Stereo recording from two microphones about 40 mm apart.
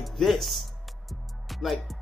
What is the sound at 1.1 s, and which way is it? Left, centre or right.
Music, centre.